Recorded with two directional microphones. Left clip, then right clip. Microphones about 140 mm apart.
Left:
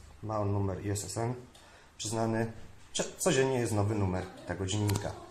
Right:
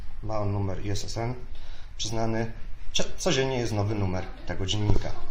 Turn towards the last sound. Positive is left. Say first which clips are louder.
# right 4 dB
turn(degrees=-5)  # may be behind; listen again after turning